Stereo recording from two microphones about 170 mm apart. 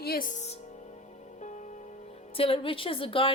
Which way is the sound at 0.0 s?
65° left (ahead or behind).